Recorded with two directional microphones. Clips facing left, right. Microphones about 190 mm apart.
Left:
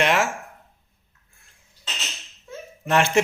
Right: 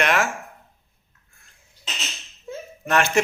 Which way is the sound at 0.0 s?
25° left (ahead or behind).